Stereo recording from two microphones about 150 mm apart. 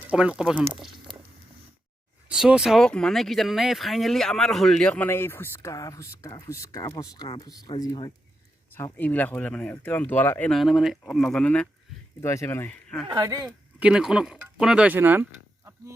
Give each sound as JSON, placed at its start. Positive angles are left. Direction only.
{"t": 0.0, "sound": "speech", "side_deg": -10}
{"t": 2.2, "sound": "speech", "side_deg": -5}
{"t": 8.7, "sound": "speech", "side_deg": 10}
{"t": 10.6, "sound": "speech", "side_deg": 0}
{"t": 12.2, "sound": "speech", "side_deg": 20}
{"t": 13.1, "sound": "speech", "side_deg": -25}
{"t": 13.7, "sound": "speech", "side_deg": -5}